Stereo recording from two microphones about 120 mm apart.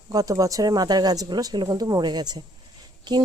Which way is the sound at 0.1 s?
30° right (ahead or behind).